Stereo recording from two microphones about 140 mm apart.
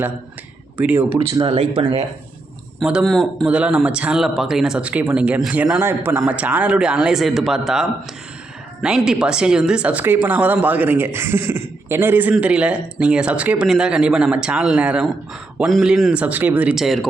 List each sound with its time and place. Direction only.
0.8 s speech: 15° right (ahead or behind)
1.3 s speech: 40° right (ahead or behind)
2.8 s speech: centre (ahead or behind)